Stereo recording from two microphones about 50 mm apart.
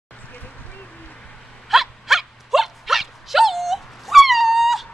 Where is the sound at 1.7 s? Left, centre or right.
Centre.